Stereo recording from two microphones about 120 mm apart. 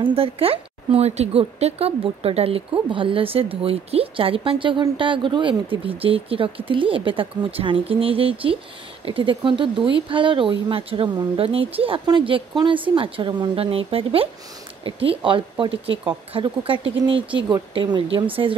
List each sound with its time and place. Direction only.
0.0 s speech: 50° right (ahead or behind)